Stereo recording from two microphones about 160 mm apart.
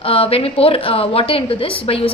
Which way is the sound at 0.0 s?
35° left (ahead or behind).